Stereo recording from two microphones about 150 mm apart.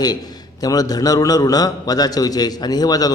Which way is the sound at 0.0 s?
25° left (ahead or behind).